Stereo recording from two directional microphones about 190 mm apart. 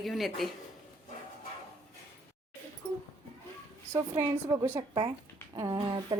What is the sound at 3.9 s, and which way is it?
A woman's voice, 15° right (ahead or behind).